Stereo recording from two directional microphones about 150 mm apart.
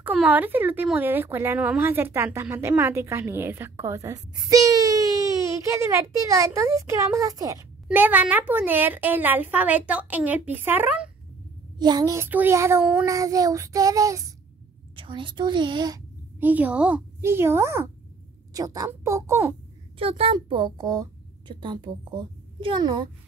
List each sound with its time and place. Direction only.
0.0 s a child's voice: 10° right (ahead or behind)
7.9 s a child's voice: 10° right (ahead or behind)
11.8 s a child's voice: 25° right (ahead or behind)
15.0 s a child's voice: 35° right (ahead or behind)
16.3 s a child's voice: 10° right (ahead or behind)
20.0 s a child's voice: 40° right (ahead or behind)